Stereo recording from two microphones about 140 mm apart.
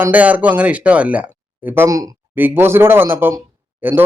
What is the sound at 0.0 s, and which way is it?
Speech, 10° right (ahead or behind).